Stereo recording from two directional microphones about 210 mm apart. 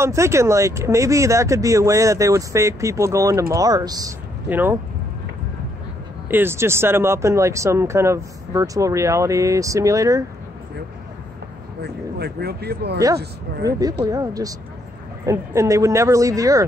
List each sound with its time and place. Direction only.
0.0 s speech: 15° right (ahead or behind)
6.3 s speech: 10° right (ahead or behind)
11.8 s speech: 50° right (ahead or behind)
13.7 s speech: 15° right (ahead or behind)